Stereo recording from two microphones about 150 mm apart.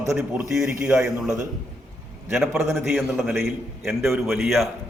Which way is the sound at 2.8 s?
Centre (ahead or behind).